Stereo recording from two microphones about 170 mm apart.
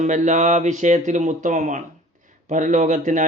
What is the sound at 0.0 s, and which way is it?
A man's voice, 45° right (ahead or behind).